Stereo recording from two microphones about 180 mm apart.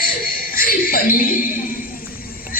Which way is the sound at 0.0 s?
55° left (ahead or behind).